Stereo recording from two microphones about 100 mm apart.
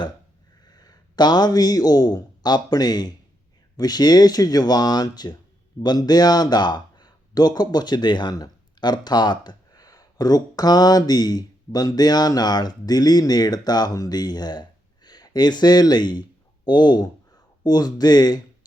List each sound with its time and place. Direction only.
0.6 s a man's voice: 40° left (ahead or behind)